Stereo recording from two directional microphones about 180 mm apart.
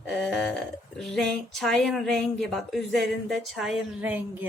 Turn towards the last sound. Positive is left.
turn(degrees=-10)  # may be behind; listen again after turning